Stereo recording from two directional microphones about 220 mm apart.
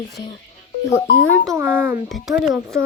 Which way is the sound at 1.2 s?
65° left (ahead or behind).